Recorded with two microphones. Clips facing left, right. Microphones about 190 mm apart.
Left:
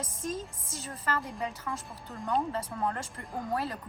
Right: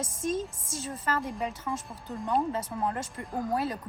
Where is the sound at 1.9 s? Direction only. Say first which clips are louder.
Right 1 dB; centre (ahead or behind).